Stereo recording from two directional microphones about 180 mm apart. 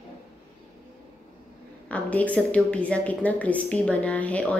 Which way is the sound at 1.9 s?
10° left (ahead or behind).